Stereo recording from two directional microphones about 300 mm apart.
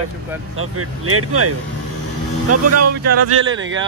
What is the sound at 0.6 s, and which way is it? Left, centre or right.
Speech, right.